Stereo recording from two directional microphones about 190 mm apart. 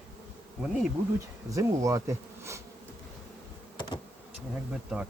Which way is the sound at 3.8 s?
25° left (ahead or behind).